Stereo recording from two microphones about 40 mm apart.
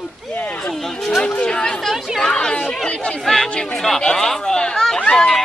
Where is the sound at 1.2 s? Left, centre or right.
Left.